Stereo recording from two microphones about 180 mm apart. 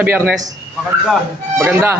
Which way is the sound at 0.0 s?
10° right (ahead or behind).